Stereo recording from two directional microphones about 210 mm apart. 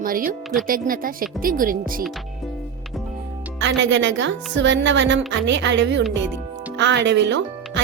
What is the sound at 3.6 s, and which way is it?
Speech, 60° right (ahead or behind).